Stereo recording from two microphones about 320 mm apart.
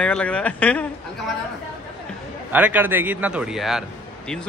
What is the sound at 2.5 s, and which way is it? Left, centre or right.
A man's voice, centre.